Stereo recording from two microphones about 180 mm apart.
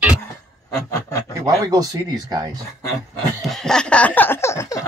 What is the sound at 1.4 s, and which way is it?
Speech, 20° right (ahead or behind).